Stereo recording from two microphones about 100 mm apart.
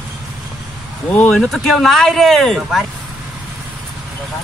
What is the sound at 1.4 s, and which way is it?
Speech, centre (ahead or behind).